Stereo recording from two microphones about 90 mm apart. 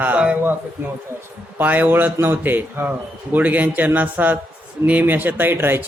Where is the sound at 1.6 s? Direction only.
20° right (ahead or behind).